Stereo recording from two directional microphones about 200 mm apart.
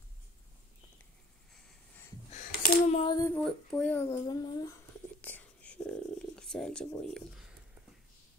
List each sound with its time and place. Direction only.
2.3 s a sound: 35° left (ahead or behind)
3.1 s female singing: 15° left (ahead or behind)
3.3 s speech: 5° left (ahead or behind)
5.2 s whispering: 10° left (ahead or behind)